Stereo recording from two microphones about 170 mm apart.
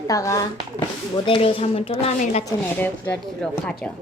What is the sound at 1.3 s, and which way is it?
A woman's voice, 30° left (ahead or behind).